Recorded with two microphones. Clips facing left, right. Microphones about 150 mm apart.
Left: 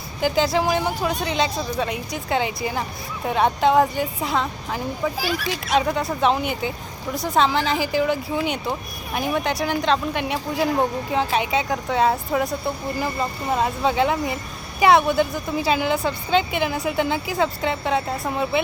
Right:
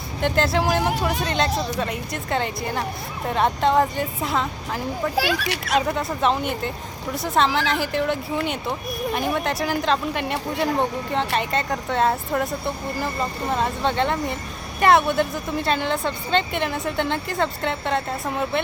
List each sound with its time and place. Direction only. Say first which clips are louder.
0.2 s a woman's voice: left 1 dB; centre (ahead or behind)
1.5 s speech: right 2 dB; 80° right
1.8 s a woman's voice: left 1 dB; centre (ahead or behind)
5.1 s speech: right 2 dB; 75° right (ahead or behind)
5.7 s a woman's voice: left 2 dB; centre (ahead or behind)